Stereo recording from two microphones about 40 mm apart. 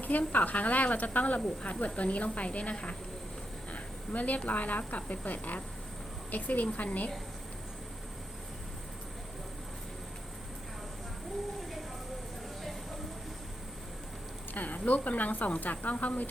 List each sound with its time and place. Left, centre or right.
0.0 s speech: left
3.7 s a sound: left
4.4 s speech: left
14.5 s speech: left